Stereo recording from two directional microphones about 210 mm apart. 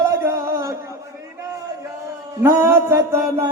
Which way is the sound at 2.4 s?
10° right (ahead or behind).